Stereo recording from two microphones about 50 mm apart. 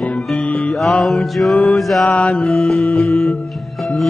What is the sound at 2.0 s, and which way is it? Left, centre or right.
Mantra, left.